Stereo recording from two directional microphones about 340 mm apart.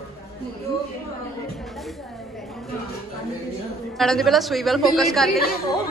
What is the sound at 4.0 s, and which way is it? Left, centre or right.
A man's voice, centre.